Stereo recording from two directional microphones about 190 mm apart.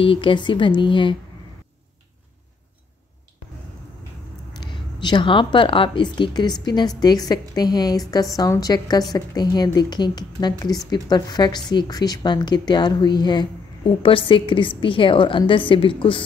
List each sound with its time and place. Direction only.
0.0 s a woman's voice: 25° left (ahead or behind)
4.6 s a woman's voice: 25° left (ahead or behind)